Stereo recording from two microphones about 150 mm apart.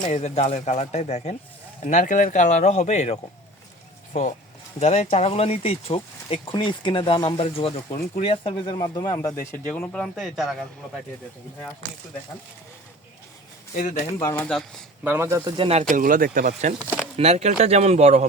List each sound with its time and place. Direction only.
0.0 s speech: 50° left (ahead or behind)
4.8 s speech: 45° left (ahead or behind); by 10.7 s centre (ahead or behind)
13.7 s speech: 50° left (ahead or behind)
14.2 s speech: 15° left (ahead or behind)
14.4 s speech: 5° left (ahead or behind)
15.0 s speech: 15° right (ahead or behind)
15.4 s speech: 35° right (ahead or behind)
15.8 s speech: 60° right (ahead or behind)
16.8 s speech: 10° right (ahead or behind)
17.2 s speech: 45° right (ahead or behind)